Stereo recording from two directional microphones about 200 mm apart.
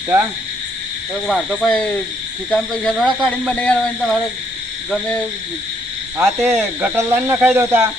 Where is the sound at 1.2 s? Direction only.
Centre (ahead or behind).